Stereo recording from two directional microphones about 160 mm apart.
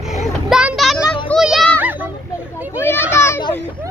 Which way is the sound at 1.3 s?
10° left (ahead or behind).